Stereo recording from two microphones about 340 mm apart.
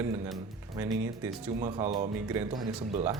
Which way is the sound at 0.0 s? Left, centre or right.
Centre.